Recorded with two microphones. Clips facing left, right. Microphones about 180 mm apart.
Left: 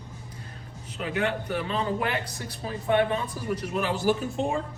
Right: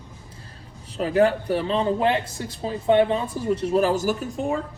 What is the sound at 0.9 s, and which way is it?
A man's voice, 35° right (ahead or behind).